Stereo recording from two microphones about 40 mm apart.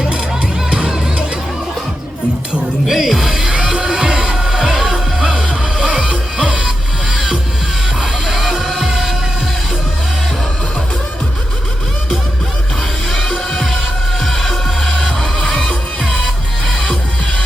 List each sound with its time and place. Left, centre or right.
2.8 s music: centre
3.3 s music: centre
6.7 s music: centre
13.1 s music: centre
16.8 s music: left